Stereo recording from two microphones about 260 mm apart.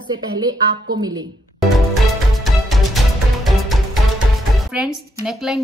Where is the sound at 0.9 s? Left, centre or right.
Centre.